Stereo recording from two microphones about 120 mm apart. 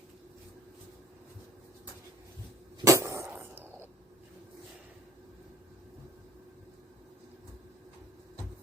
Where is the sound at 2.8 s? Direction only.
25° right (ahead or behind).